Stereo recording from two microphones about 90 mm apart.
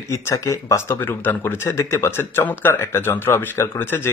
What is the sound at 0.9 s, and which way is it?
Speech, 25° left (ahead or behind).